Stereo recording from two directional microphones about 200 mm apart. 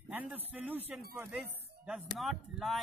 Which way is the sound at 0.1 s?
10° right (ahead or behind).